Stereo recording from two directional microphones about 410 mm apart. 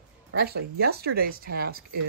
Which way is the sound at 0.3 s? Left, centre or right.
Right.